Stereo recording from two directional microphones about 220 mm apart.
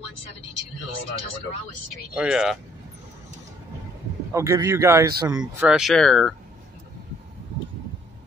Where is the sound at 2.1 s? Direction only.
5° right (ahead or behind).